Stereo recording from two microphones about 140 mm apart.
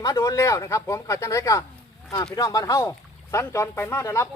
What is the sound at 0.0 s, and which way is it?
Speech, 25° left (ahead or behind).